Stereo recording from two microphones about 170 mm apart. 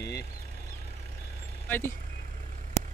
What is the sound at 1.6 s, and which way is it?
Speech, 10° left (ahead or behind).